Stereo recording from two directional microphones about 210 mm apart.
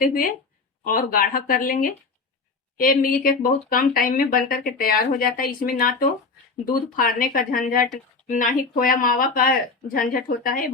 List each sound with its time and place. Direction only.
0.0 s speech: 45° left (ahead or behind)